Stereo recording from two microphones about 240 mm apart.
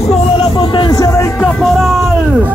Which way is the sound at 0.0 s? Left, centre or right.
Left.